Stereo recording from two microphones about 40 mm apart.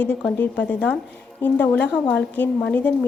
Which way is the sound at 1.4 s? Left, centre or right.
Left.